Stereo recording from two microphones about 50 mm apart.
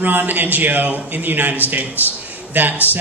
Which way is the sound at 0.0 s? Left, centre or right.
Right.